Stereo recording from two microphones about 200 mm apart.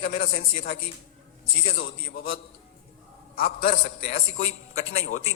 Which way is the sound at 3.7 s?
30° left (ahead or behind).